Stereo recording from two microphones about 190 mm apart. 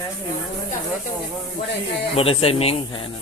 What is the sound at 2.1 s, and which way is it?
Speech, 30° left (ahead or behind).